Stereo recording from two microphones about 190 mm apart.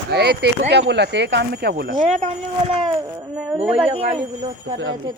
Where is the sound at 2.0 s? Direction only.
35° right (ahead or behind).